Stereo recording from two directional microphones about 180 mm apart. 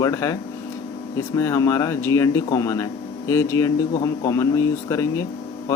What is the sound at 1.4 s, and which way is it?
A man's voice, 15° left (ahead or behind).